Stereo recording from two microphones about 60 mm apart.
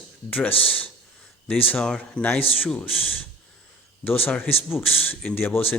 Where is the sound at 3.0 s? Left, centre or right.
Left.